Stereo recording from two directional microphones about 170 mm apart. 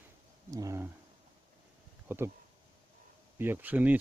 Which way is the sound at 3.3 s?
10° right (ahead or behind).